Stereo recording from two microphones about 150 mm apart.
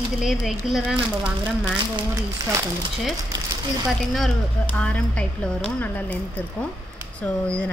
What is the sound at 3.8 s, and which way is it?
A woman's voice, centre (ahead or behind).